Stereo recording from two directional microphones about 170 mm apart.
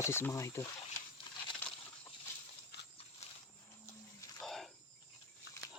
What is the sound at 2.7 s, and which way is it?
Horse, 75° left (ahead or behind).